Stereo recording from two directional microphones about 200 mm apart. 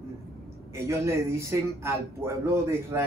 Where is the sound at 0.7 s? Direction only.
15° right (ahead or behind).